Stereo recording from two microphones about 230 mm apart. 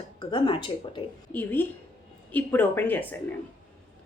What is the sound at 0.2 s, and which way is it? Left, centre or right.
Speech, left.